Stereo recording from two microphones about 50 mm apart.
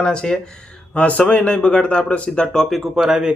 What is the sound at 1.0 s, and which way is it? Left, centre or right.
Speech, left.